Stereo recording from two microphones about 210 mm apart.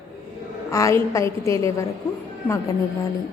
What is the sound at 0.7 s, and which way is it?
A woman's voice, 15° left (ahead or behind).